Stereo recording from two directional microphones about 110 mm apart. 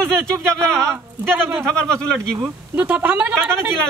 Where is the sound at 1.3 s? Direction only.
20° right (ahead or behind).